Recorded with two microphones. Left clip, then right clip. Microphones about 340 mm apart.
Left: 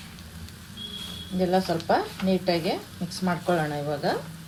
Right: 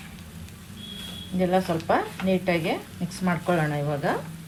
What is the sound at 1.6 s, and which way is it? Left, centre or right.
Speech, right.